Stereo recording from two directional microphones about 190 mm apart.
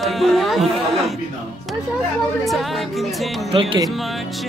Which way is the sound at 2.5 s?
Centre (ahead or behind).